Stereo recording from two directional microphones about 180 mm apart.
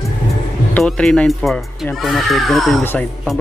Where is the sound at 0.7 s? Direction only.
5° left (ahead or behind).